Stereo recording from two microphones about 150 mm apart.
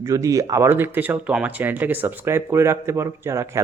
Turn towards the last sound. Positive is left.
turn(degrees=-20)  # may be behind; listen again after turning